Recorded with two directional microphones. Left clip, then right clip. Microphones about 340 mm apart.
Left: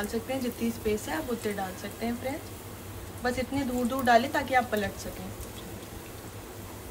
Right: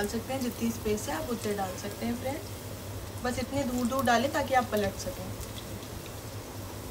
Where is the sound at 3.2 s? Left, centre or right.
Centre.